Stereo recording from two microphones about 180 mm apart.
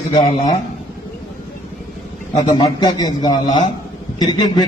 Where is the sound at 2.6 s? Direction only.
25° left (ahead or behind).